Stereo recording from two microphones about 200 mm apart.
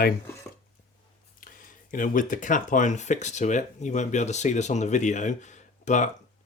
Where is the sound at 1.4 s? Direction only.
45° left (ahead or behind).